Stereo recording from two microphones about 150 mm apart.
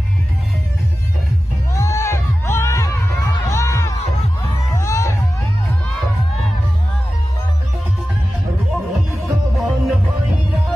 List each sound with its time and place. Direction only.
1.7 s music: 20° left (ahead or behind)
9.2 s music: centre (ahead or behind)